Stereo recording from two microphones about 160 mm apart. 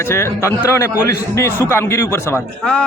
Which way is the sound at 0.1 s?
15° left (ahead or behind).